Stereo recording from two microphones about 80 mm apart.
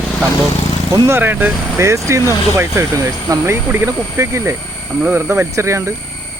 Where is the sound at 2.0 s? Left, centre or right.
Right.